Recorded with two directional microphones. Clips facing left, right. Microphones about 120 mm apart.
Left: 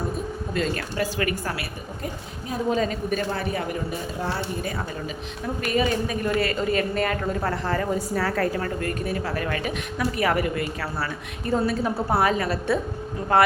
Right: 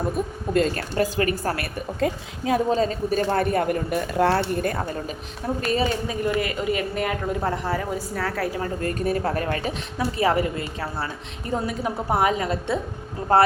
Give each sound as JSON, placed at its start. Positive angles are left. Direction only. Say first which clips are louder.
{"t": 0.5, "sound": "a woman's voice", "louder": "right 5 dB", "side_deg": -40}
{"t": 2.0, "sound": "a woman's voice", "louder": "right 10 dB", "side_deg": -90}
{"t": 2.6, "sound": "a woman's voice", "louder": "right 2 dB", "side_deg": -35}
{"t": 3.2, "sound": "speech", "louder": "right 6 dB", "side_deg": -50}
{"t": 5.6, "sound": "speech", "louder": "left 1 dB", "side_deg": -30}
{"t": 8.4, "sound": "speech", "louder": "left 1 dB", "side_deg": -15}
{"t": 8.8, "sound": "a woman's voice", "louder": "right 3 dB", "side_deg": -35}
{"t": 13.3, "sound": "a woman's voice", "louder": "right 2 dB", "side_deg": -35}